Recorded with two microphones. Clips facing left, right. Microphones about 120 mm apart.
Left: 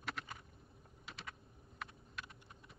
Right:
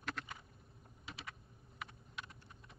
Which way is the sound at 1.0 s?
Centre (ahead or behind).